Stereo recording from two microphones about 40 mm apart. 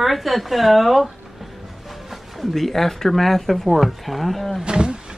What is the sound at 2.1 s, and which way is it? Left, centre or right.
Speech, centre.